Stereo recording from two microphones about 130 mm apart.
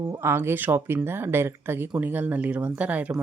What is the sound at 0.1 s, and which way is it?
Speech, 20° right (ahead or behind).